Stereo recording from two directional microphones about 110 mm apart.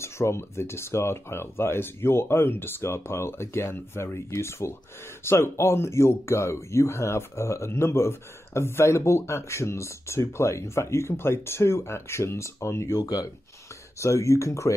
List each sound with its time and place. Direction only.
0.0 s speech: 25° left (ahead or behind)